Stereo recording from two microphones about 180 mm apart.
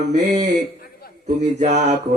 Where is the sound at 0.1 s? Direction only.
45° right (ahead or behind).